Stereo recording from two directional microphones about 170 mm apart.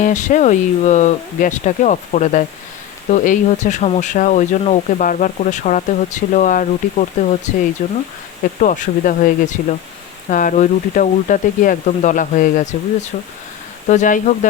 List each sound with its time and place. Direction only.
0.0 s speech: 45° left (ahead or behind)